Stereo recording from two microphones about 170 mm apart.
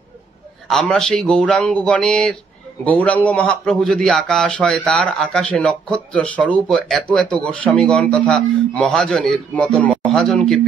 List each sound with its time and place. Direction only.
0.7 s a man's voice: 5° left (ahead or behind)